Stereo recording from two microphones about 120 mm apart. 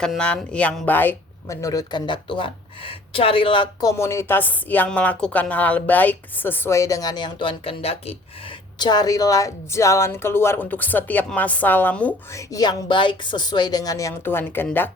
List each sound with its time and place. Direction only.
0.0 s speech: 5° left (ahead or behind)
1.6 s speech: 35° left (ahead or behind)
3.8 s speech: 25° left (ahead or behind); by 8.1 s 55° left (ahead or behind)
8.8 s speech: 35° left (ahead or behind); by 12.1 s 15° left (ahead or behind)
12.5 s speech: 40° left (ahead or behind)
14.3 s speech: 20° left (ahead or behind)